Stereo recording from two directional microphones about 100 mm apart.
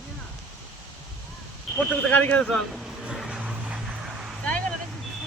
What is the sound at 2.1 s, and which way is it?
Speech, 15° left (ahead or behind).